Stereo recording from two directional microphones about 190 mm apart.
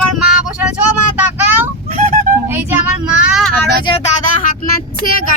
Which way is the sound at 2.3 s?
45° right (ahead or behind).